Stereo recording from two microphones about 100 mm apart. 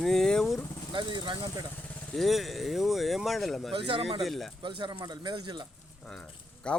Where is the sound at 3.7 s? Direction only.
65° right (ahead or behind).